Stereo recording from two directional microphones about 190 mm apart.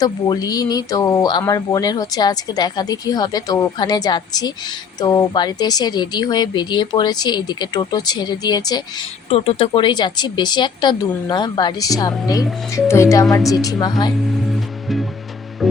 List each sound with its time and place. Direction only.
0.0 s speech: 20° left (ahead or behind)
14.5 s music: centre (ahead or behind)